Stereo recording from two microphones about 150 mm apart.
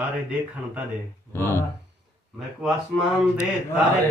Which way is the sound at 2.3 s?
Centre (ahead or behind).